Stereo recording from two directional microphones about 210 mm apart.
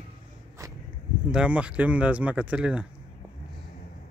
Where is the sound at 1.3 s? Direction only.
5° right (ahead or behind).